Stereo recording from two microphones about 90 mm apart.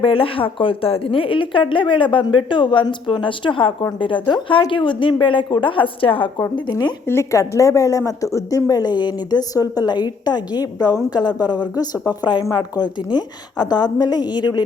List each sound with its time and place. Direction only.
0.0 s speech: 85° left
6.7 s a woman's voice: 45° left (ahead or behind)
7.1 s a woman's voice: 35° left (ahead or behind); by 14.6 s 50° left (ahead or behind)